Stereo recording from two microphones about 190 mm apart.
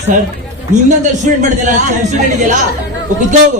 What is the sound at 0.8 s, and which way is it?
A woman's voice, 40° right (ahead or behind).